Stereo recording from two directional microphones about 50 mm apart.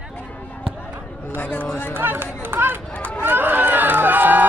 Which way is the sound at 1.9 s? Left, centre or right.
Right.